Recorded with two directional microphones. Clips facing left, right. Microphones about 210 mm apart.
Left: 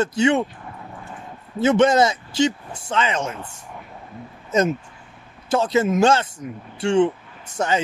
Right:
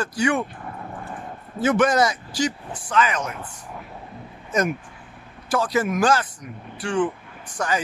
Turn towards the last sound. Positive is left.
turn(degrees=25)  # may be behind; listen again after turning